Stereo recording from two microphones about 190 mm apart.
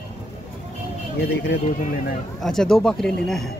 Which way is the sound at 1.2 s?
55° left (ahead or behind).